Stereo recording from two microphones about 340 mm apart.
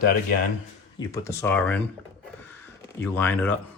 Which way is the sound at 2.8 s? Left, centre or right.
Centre.